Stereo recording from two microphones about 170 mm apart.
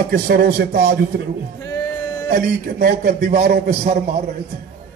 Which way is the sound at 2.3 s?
55° right (ahead or behind).